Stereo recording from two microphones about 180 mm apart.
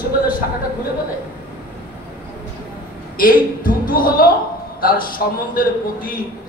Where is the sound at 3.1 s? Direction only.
50° left (ahead or behind).